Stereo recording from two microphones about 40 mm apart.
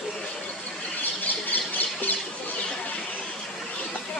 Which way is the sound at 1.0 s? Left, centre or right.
Left.